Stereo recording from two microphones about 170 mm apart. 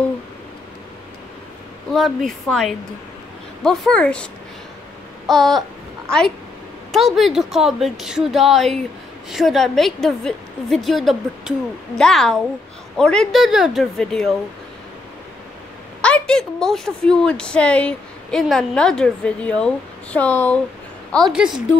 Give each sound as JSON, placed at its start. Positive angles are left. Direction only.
{"t": 1.9, "sound": "a woman's voice", "side_deg": 0}
{"t": 5.2, "sound": "babbling", "side_deg": 0}
{"t": 6.0, "sound": "a woman's voice", "side_deg": 5}
{"t": 16.0, "sound": "a woman's voice", "side_deg": 5}